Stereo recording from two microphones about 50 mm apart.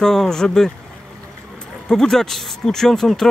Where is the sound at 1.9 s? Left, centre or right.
Centre.